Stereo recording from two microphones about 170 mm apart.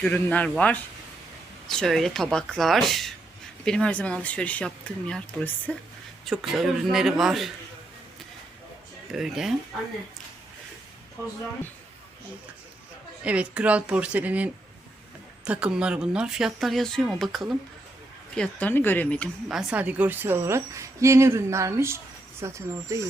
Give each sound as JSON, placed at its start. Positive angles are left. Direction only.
{"t": 0.0, "sound": "speech", "side_deg": 10}
{"t": 9.1, "sound": "speech", "side_deg": 0}
{"t": 13.2, "sound": "a woman's voice", "side_deg": -5}
{"t": 18.3, "sound": "speech", "side_deg": 10}
{"t": 19.5, "sound": "a woman's voice", "side_deg": -5}